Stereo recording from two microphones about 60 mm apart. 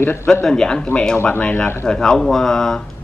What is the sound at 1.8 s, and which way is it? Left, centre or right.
Speech, centre.